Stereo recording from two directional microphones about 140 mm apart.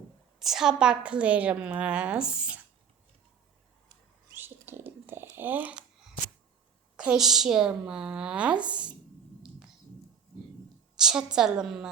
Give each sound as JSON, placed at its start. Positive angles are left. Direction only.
{"t": 0.3, "sound": "a woman's voice", "side_deg": -5}
{"t": 4.4, "sound": "a sound", "side_deg": -15}
{"t": 5.4, "sound": "a woman's voice", "side_deg": -15}
{"t": 6.9, "sound": "a woman's voice", "side_deg": -5}
{"t": 10.9, "sound": "a woman's voice", "side_deg": -5}